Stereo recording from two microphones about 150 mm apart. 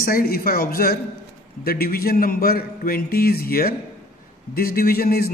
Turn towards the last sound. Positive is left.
turn(degrees=90)